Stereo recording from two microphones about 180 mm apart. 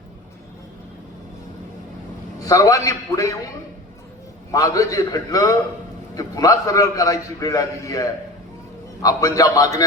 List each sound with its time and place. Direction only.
2.5 s a man's voice: 20° left (ahead or behind)
4.5 s a man's voice: 20° left (ahead or behind)